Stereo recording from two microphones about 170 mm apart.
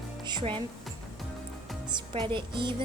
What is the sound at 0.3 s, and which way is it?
Speech, 30° right (ahead or behind).